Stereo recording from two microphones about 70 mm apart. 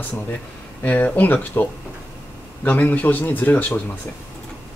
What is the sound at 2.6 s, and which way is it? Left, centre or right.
Speech, left.